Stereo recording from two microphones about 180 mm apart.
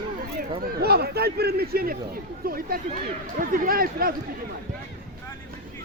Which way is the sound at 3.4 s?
50° right (ahead or behind).